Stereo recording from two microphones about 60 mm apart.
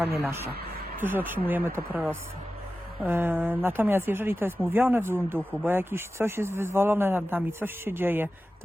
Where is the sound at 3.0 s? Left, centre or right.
Right.